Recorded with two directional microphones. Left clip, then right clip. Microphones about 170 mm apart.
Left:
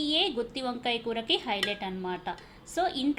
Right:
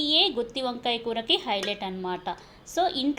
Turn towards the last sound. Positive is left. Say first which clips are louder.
# right 3 dB
turn(degrees=-15)  # may be behind; listen again after turning